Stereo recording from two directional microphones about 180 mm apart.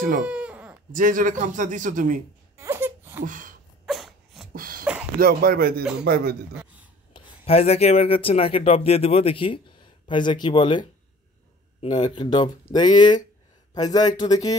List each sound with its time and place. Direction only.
0.2 s baby cry: 5° right (ahead or behind)
0.9 s a man's voice: 50° right (ahead or behind)
2.5 s wail: 15° right (ahead or behind)
3.3 s a sound: 45° right (ahead or behind)
3.8 s dog: centre (ahead or behind)
4.6 s a sound: 55° right (ahead or behind)
5.2 s speech: 55° right (ahead or behind)
6.5 s a sound: 10° right (ahead or behind)
7.2 s speech: 30° left (ahead or behind)